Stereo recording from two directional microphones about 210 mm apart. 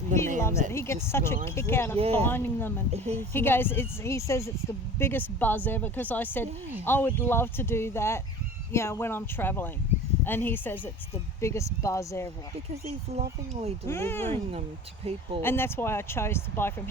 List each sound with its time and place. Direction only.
0.1 s speech: 35° right (ahead or behind)
0.7 s speech: 10° left (ahead or behind)
2.0 s speech: 30° right (ahead or behind)
2.2 s speech: 10° left (ahead or behind)
2.9 s a woman's voice: 30° right (ahead or behind)
3.2 s speech: 10° left (ahead or behind)
12.8 s speech: 30° right (ahead or behind)
13.8 s speech: 10° left (ahead or behind)
15.0 s speech: 30° right (ahead or behind)
15.4 s speech: 10° left (ahead or behind)